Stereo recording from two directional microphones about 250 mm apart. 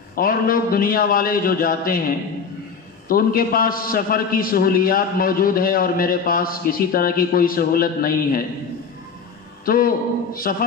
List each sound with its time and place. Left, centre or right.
0.1 s a man's voice: left
9.7 s a man's voice: left